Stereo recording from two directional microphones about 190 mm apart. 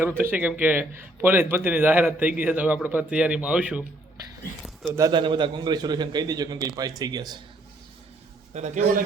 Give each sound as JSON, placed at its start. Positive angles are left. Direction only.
{"t": 0.0, "sound": "a man's voice", "side_deg": -10}
{"t": 4.9, "sound": "a man's voice", "side_deg": -20}
{"t": 8.5, "sound": "a man's voice", "side_deg": -35}